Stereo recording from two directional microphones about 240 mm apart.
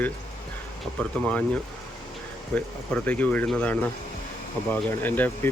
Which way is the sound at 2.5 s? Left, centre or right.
Centre.